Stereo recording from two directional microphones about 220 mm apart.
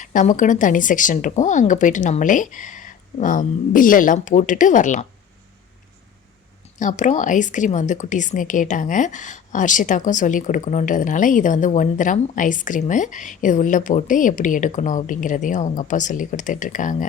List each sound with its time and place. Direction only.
0.0 s a woman's voice: 35° left (ahead or behind)
6.7 s a woman's voice: 35° left (ahead or behind)